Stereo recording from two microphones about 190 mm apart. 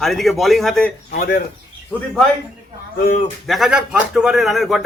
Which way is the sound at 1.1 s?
50° left (ahead or behind).